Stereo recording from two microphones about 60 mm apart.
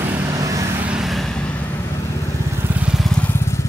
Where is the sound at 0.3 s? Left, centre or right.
Right.